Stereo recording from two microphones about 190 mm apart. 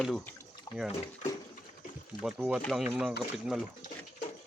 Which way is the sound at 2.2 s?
5° right (ahead or behind).